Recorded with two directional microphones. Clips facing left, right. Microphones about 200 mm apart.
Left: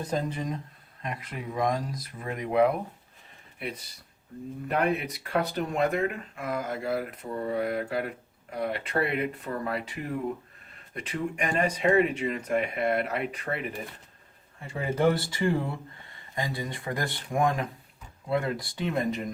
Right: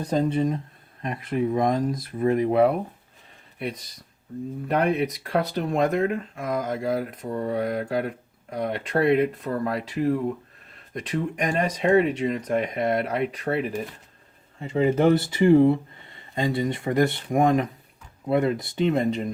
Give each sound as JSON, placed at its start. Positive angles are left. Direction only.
{"t": 0.0, "sound": "speech", "side_deg": -35}
{"t": 1.5, "sound": "speech", "side_deg": -25}
{"t": 14.6, "sound": "speech", "side_deg": -20}